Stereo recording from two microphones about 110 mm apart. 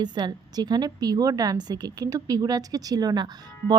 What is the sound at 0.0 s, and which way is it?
A woman's voice, 40° right (ahead or behind).